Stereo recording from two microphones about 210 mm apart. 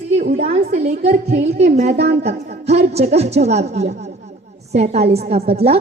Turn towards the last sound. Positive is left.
turn(degrees=-30)  # may be behind; listen again after turning